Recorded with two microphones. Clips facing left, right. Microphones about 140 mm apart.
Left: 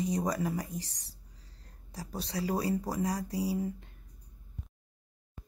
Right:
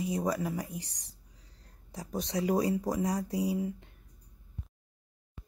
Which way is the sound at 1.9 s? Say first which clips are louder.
Right 3 dB; 20° right (ahead or behind).